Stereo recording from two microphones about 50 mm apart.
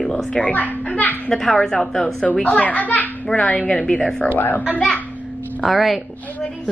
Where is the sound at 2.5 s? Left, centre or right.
Left.